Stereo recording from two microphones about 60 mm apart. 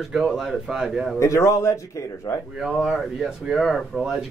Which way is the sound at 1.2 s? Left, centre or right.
Left.